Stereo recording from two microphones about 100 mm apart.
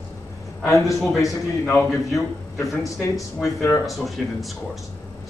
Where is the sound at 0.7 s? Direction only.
35° left (ahead or behind).